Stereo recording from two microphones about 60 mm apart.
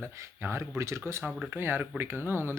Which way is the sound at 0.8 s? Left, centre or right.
Right.